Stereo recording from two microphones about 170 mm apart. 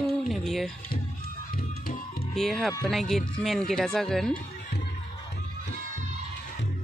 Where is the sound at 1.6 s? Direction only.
60° left (ahead or behind).